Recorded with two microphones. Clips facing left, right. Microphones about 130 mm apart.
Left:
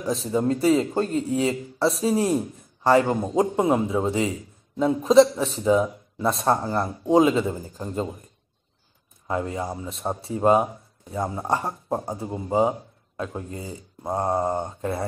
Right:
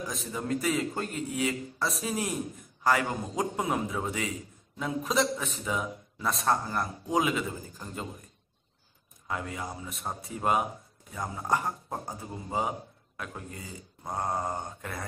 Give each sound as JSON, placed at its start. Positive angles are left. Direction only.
{"t": 0.0, "sound": "speech", "side_deg": 30}
{"t": 9.3, "sound": "speech", "side_deg": 30}